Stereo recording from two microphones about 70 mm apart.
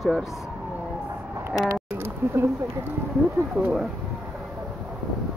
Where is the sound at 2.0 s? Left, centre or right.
Right.